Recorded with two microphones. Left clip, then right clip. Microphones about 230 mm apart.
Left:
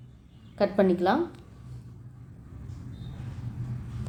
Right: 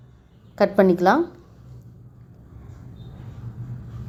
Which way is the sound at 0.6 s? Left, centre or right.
Right.